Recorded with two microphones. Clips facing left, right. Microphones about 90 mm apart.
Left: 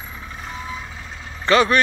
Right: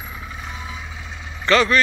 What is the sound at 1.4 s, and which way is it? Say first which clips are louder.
Speech: left 1 dB; 25° left (ahead or behind).